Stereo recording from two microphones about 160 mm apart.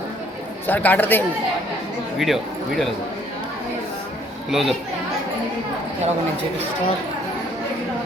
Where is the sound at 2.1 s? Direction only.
Centre (ahead or behind).